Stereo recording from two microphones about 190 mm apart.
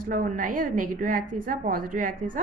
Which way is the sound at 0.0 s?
45° right (ahead or behind).